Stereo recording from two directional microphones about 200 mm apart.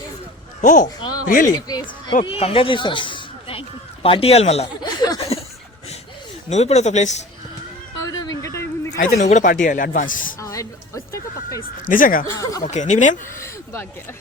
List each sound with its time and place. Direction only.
0.6 s speech: 40° left (ahead or behind)
1.5 s speech: 20° left (ahead or behind)
4.9 s a sound: 20° left (ahead or behind)
6.5 s speech: 35° left (ahead or behind)
8.1 s a sound: 20° left (ahead or behind)
9.0 s speech: 35° left (ahead or behind)
10.4 s music: 15° left (ahead or behind)
11.9 s speech: 45° left (ahead or behind)
12.4 s speech: 20° left (ahead or behind)
12.6 s speech: 35° left (ahead or behind)